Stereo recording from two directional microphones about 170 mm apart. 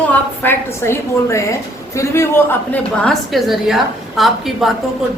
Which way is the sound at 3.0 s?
Centre (ahead or behind).